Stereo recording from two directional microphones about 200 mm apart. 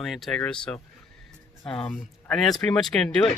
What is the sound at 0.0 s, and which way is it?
Speech, centre (ahead or behind).